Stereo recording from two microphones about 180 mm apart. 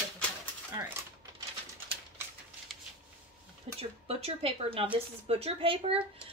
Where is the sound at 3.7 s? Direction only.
35° right (ahead or behind).